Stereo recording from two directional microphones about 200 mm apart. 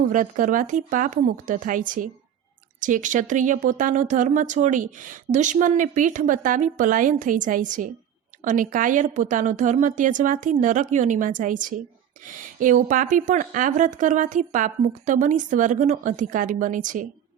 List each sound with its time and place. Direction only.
0.0 s speech: 40° right (ahead or behind)